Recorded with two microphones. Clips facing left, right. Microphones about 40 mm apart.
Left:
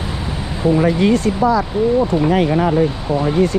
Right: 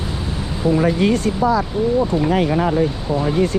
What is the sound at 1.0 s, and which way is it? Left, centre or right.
Speech, left.